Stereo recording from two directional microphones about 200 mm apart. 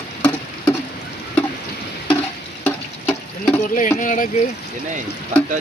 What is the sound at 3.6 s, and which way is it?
Speech, 40° left (ahead or behind).